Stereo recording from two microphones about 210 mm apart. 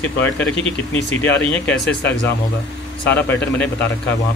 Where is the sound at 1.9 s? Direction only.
55° left (ahead or behind).